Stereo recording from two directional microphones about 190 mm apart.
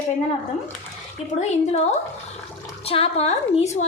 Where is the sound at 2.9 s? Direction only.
30° left (ahead or behind).